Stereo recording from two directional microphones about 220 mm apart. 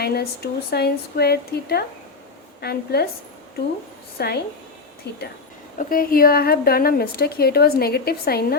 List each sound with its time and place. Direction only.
0.0 s a woman's voice: 45° left (ahead or behind)
4.2 s a woman's voice: 45° left (ahead or behind)